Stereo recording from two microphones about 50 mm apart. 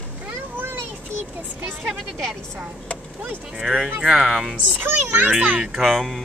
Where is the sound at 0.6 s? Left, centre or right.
Right.